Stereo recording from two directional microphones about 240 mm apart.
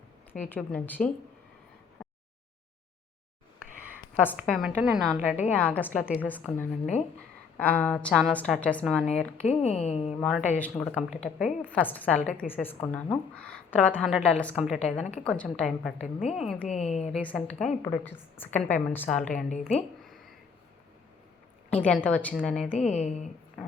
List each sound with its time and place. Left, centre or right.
0.3 s a woman's voice: centre
2.0 s a sound: centre
4.4 s a woman's voice: centre
9.4 s speech: left
10.2 s a woman's voice: centre
16.6 s speech: left
17.2 s a woman's voice: centre
21.7 s a woman's voice: centre
22.7 s speech: left